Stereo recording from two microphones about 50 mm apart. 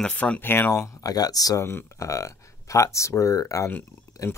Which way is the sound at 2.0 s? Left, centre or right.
Left.